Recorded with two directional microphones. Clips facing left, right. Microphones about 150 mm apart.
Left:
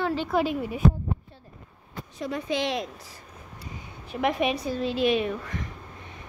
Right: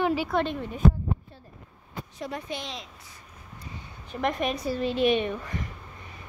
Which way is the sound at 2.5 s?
80° left.